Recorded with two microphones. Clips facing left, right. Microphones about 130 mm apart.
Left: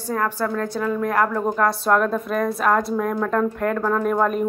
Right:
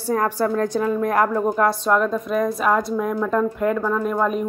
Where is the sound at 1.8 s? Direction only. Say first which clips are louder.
Even; 5° left (ahead or behind).